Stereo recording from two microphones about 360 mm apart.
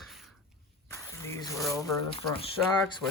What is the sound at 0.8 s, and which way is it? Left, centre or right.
Speech, centre.